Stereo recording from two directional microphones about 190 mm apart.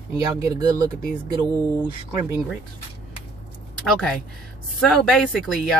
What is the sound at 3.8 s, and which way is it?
Speech, centre (ahead or behind).